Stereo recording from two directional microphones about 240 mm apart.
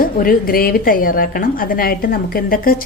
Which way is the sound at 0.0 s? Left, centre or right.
Left.